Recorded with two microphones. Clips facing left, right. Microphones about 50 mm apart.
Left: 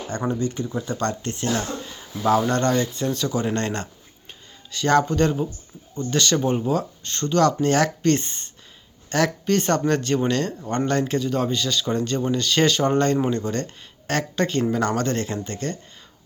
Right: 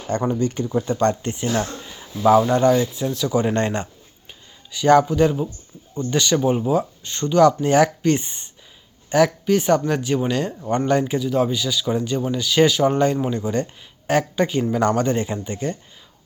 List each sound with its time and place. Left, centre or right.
0.3 s speech: right
0.6 s speech: centre
2.4 s speech: centre
3.3 s speech: centre